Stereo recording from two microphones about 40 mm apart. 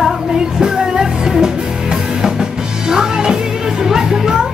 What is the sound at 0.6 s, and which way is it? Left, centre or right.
Music, centre.